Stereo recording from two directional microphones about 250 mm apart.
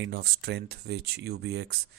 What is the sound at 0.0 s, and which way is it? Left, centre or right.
Speech, right.